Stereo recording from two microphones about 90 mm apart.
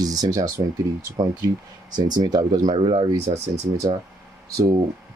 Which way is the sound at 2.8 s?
90° right.